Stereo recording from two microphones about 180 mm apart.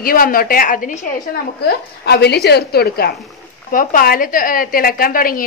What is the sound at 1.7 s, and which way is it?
A woman's voice, 65° left (ahead or behind).